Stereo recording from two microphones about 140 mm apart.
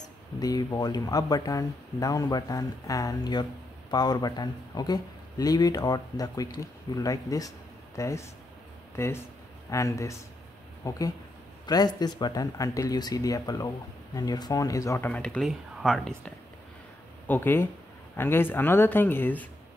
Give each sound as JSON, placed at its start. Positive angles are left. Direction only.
{"t": 0.4, "sound": "speech", "side_deg": 25}
{"t": 15.0, "sound": "speech", "side_deg": 10}
{"t": 17.3, "sound": "speech", "side_deg": 15}